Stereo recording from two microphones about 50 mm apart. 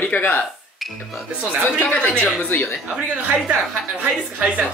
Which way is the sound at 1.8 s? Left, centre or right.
Left.